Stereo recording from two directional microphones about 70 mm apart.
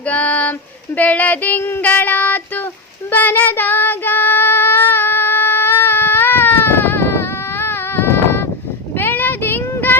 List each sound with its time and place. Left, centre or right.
0.1 s a sound: left
0.9 s female singing: left
1.9 s child singing: left